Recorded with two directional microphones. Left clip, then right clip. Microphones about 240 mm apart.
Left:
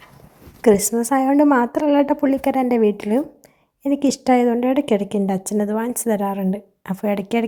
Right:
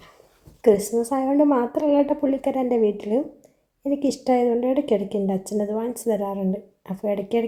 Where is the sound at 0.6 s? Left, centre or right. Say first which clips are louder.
Left 2 dB; left.